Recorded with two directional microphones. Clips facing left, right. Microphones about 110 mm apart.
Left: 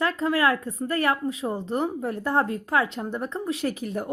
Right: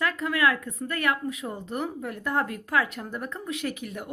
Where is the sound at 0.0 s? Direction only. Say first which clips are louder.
Left 2 dB; 30° left (ahead or behind).